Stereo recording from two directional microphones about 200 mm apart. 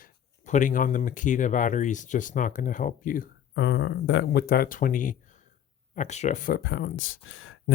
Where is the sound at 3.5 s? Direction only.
65° left (ahead or behind); by 6.6 s 40° left (ahead or behind).